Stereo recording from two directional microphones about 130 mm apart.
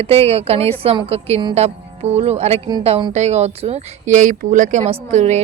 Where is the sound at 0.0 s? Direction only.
50° right (ahead or behind); by 4.8 s 80° right.